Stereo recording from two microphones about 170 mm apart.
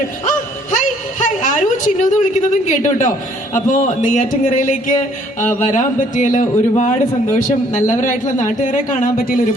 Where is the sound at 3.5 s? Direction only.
45° left (ahead or behind).